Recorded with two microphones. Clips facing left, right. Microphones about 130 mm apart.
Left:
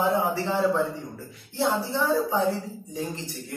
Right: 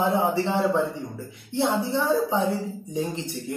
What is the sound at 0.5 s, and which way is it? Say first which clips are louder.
A man's voice: right 1 dB; 20° right (ahead or behind).